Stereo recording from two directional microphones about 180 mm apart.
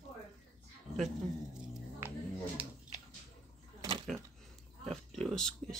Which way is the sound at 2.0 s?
15° right (ahead or behind).